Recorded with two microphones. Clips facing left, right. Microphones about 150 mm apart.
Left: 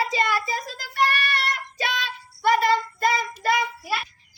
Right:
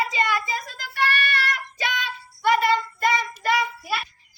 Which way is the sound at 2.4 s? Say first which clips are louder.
Even; 35° left (ahead or behind).